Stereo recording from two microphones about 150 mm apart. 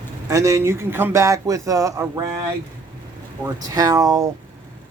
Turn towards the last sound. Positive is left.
turn(degrees=-25)  # may be behind; listen again after turning